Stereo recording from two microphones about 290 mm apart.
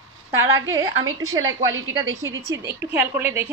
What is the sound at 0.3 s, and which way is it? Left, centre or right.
A woman's voice, right.